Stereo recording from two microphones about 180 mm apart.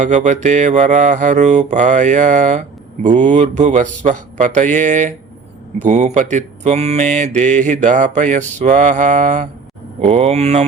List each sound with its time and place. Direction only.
0.0 s speech: 45° right (ahead or behind)
5.8 s mantra: 40° right (ahead or behind)